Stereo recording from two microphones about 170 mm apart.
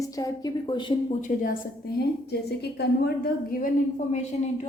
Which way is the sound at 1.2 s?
55° left (ahead or behind).